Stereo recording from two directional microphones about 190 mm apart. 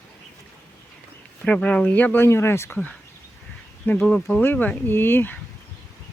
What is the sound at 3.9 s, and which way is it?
Speech, 5° left (ahead or behind).